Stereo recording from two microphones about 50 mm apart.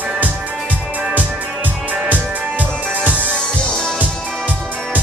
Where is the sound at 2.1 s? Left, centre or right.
Right.